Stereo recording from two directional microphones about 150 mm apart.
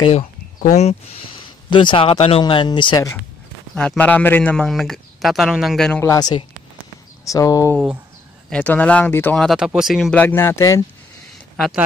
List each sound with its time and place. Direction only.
0.6 s speech: 50° left (ahead or behind)
1.7 s speech: 35° left (ahead or behind)
2.4 s speech: 30° left (ahead or behind)
3.7 s a man's voice: 5° left (ahead or behind)
6.0 s speech: 25° left (ahead or behind)
8.5 s speech: 10° left (ahead or behind)
10.1 s speech: 15° left (ahead or behind)
11.5 s speech: centre (ahead or behind)